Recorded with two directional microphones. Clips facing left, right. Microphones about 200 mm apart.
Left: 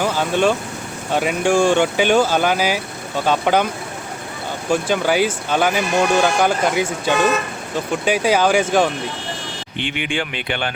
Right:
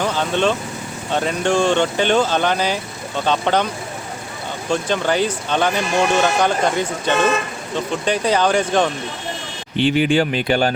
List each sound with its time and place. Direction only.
0.0 s vehicle: 10° left (ahead or behind)
1.1 s speech: 10° left (ahead or behind)
4.7 s speech: 5° left (ahead or behind)
9.7 s speech: 35° right (ahead or behind)